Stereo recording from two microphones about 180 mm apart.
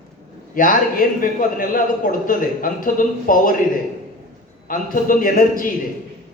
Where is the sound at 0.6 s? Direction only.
50° left (ahead or behind).